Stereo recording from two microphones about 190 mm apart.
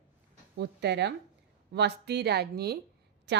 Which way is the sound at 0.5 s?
60° right (ahead or behind).